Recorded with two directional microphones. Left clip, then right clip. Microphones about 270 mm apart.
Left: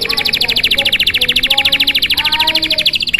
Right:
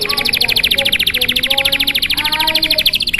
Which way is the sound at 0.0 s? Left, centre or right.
Centre.